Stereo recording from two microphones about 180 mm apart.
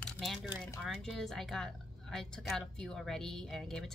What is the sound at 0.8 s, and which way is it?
A woman's voice, centre (ahead or behind).